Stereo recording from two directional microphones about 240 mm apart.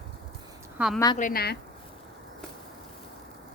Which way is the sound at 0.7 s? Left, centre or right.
Centre.